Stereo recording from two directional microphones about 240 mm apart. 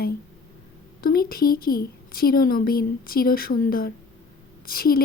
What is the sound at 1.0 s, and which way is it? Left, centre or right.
Speech, left.